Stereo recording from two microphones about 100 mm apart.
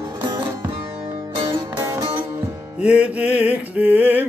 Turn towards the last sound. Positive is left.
turn(degrees=-15)  # may be behind; listen again after turning